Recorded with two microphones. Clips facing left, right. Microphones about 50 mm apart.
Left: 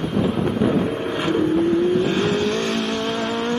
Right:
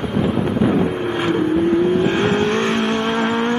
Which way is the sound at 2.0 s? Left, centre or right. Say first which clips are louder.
Right 3 dB; right.